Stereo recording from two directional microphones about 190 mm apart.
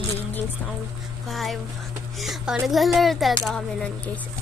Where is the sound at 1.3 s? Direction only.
Centre (ahead or behind).